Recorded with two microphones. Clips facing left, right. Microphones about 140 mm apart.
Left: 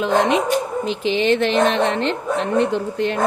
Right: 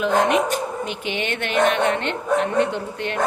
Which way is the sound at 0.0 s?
25° left (ahead or behind).